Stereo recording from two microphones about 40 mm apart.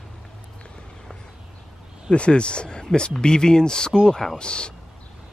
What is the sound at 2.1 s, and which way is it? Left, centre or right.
Speech, left.